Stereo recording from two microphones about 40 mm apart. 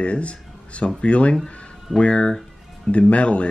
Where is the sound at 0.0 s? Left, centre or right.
Left.